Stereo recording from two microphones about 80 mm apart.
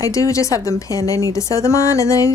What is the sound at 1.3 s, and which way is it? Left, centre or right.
Music, left.